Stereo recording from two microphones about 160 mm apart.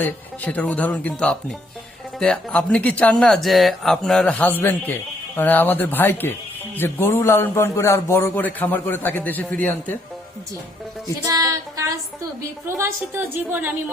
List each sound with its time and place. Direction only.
0.0 s a man's voice: 10° left (ahead or behind)
11.2 s music: 20° right (ahead or behind)
12.6 s a woman's voice: 15° right (ahead or behind)